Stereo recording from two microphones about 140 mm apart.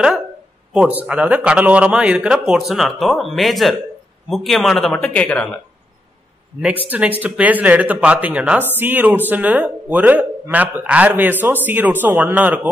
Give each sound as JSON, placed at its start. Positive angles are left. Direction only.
{"t": 0.7, "sound": "speech", "side_deg": -10}
{"t": 6.6, "sound": "speech", "side_deg": -10}